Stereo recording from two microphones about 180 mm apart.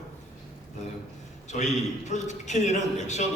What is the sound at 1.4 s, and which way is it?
A man's voice, 40° left (ahead or behind).